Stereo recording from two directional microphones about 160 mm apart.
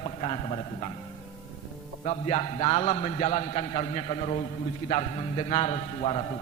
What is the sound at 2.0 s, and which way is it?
A man's voice, 40° left (ahead or behind).